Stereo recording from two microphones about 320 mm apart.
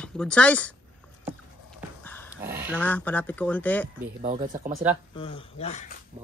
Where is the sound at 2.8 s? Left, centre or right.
Centre.